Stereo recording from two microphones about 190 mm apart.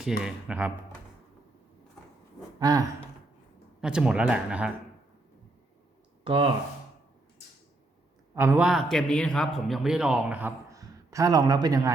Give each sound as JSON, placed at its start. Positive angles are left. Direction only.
{"t": 0.2, "sound": "speech", "side_deg": -5}
{"t": 2.6, "sound": "speech", "side_deg": -20}
{"t": 3.8, "sound": "speech", "side_deg": -5}
{"t": 6.2, "sound": "speech", "side_deg": -30}
{"t": 8.4, "sound": "a man's voice", "side_deg": -10}